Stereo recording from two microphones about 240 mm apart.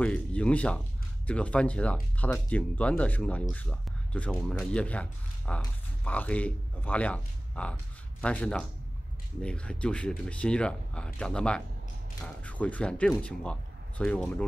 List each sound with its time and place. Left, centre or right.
0.0 s speech: centre